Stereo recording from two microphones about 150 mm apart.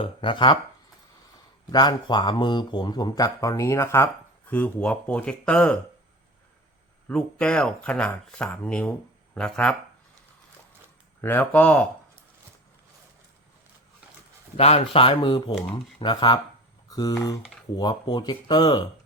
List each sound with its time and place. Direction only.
0.0 s speech: 35° left (ahead or behind)
1.7 s speech: 30° left (ahead or behind); by 5.8 s 5° left (ahead or behind)
7.1 s speech: 5° left (ahead or behind)
11.2 s speech: 15° left (ahead or behind)
14.5 s speech: 45° left (ahead or behind)